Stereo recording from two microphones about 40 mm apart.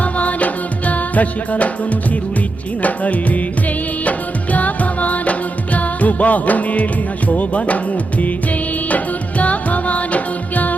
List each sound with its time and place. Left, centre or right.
0.0 s music: left
4.5 s music: left
9.4 s music: left